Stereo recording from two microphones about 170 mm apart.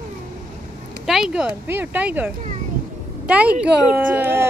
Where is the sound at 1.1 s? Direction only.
5° right (ahead or behind).